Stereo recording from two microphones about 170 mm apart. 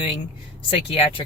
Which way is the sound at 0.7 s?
35° left (ahead or behind).